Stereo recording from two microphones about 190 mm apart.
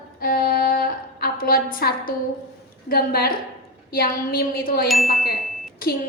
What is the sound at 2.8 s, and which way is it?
A woman's voice, 55° left (ahead or behind).